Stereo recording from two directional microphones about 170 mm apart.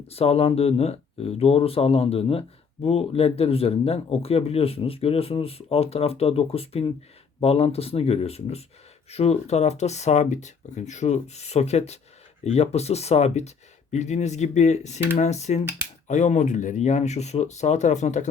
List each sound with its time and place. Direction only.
0.1 s speech: 35° left (ahead or behind)